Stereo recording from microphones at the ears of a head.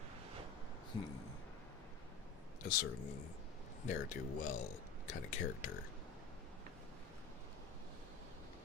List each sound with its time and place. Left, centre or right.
2.6 s speech: left